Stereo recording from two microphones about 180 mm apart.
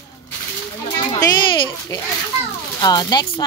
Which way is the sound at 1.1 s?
20° left (ahead or behind).